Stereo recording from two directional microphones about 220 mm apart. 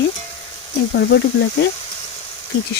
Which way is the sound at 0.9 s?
50° left (ahead or behind).